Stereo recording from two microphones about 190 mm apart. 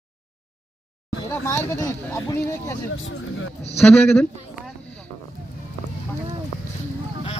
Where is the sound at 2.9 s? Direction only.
90° left.